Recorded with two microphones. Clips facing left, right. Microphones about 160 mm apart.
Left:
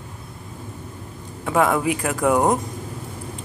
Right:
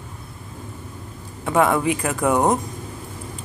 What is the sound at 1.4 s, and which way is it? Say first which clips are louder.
Speech: right 1 dB; centre (ahead or behind).